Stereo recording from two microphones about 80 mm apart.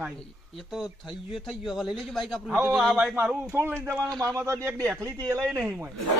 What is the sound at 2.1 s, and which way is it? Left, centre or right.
Speech, centre.